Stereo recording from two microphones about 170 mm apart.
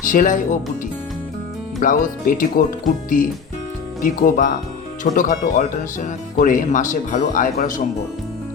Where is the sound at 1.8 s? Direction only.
50° left (ahead or behind).